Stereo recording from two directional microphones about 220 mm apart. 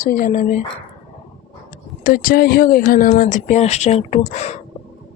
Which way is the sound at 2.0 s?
40° left (ahead or behind).